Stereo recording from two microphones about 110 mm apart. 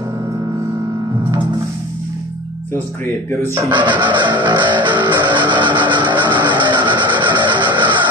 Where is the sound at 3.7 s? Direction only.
45° right (ahead or behind).